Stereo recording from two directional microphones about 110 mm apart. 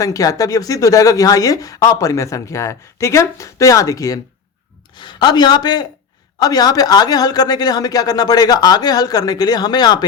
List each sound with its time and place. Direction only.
0.0 s speech: 30° left (ahead or behind)
4.9 s speech: 45° left (ahead or behind)